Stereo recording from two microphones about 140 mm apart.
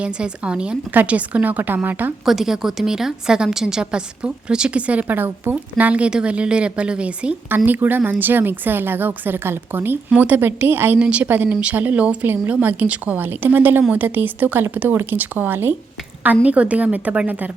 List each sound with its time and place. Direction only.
0.0 s a woman's voice: 5° right (ahead or behind)
2.2 s a woman's voice: centre (ahead or behind)